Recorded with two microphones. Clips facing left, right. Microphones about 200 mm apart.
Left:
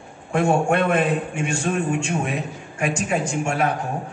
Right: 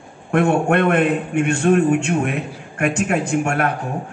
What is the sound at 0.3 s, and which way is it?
A man's voice, 60° right (ahead or behind).